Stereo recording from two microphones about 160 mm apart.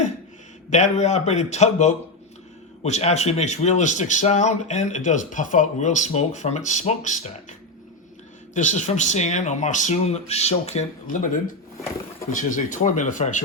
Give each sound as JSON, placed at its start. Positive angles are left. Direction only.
{"t": 0.7, "sound": "speech", "side_deg": 45}
{"t": 8.5, "sound": "speech", "side_deg": 50}
{"t": 11.0, "sound": "speech", "side_deg": 55}
{"t": 12.3, "sound": "speech", "side_deg": 55}